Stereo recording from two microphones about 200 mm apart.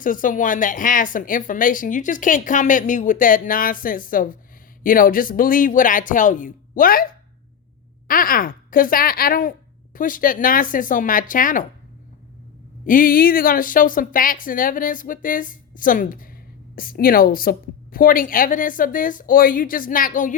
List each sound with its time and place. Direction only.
0.0 s speech: 40° left (ahead or behind)
12.8 s speech: 45° left (ahead or behind)